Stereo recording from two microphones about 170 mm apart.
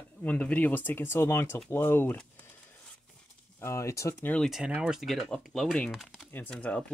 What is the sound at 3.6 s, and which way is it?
Speech, 15° left (ahead or behind).